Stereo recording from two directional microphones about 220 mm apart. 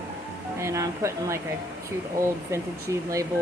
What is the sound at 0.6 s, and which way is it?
Speech, 15° right (ahead or behind).